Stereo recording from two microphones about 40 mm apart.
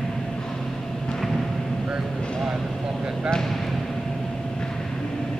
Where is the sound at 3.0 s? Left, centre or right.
Centre.